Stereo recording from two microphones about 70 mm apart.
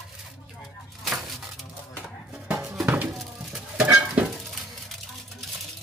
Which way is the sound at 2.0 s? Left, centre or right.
Centre.